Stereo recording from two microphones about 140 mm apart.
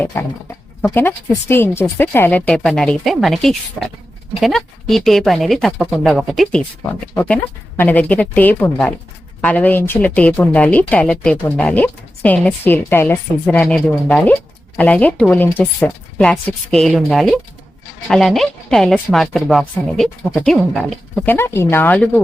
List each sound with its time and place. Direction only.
0.0 s speech: 15° left (ahead or behind)
7.8 s speech: 10° left (ahead or behind)
21.2 s speech: 15° left (ahead or behind)